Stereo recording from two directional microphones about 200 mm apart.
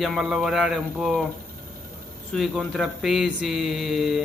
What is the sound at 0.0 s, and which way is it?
A man's voice, centre (ahead or behind).